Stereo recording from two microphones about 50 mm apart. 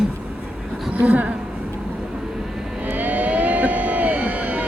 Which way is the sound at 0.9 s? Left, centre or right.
Right.